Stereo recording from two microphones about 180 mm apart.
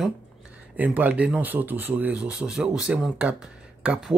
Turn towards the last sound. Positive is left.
turn(degrees=-5)  # may be behind; listen again after turning